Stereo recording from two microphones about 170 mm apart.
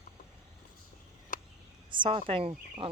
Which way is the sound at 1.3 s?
50° left (ahead or behind).